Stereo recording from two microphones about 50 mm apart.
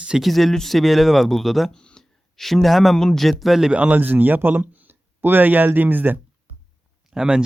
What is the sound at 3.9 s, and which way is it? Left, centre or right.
Speech, right.